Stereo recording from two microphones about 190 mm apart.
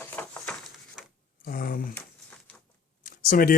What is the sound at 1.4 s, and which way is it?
Speech, 50° left (ahead or behind).